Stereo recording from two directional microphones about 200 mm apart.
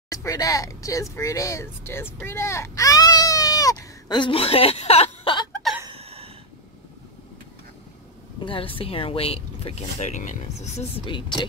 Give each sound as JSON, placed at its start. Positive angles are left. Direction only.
{"t": 0.1, "sound": "speech", "side_deg": 15}
{"t": 5.9, "sound": "a sound", "side_deg": -30}
{"t": 8.4, "sound": "speech", "side_deg": 25}